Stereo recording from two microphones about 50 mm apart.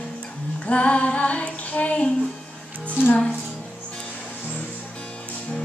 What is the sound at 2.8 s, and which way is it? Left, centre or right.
Music, left.